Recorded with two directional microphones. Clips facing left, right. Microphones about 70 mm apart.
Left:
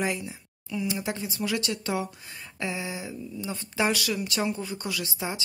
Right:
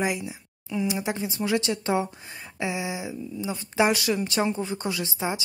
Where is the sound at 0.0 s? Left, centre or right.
Centre.